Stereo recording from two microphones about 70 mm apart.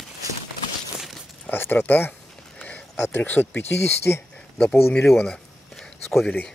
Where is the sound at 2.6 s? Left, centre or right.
Centre.